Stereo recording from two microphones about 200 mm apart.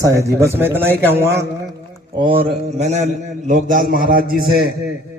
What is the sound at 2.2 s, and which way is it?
A man's voice, 25° right (ahead or behind).